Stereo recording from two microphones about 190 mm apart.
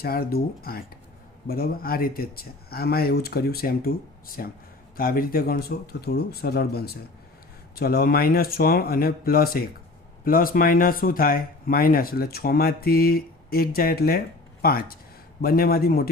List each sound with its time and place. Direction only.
0.0 s speech: 55° left (ahead or behind)